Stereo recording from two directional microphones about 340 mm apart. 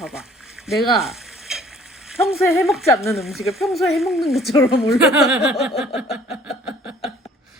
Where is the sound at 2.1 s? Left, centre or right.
Centre.